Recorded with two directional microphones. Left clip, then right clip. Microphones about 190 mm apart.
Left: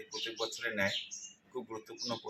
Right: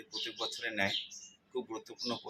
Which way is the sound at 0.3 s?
5° left (ahead or behind).